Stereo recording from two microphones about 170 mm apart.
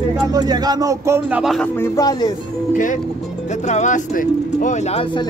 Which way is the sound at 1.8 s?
20° left (ahead or behind).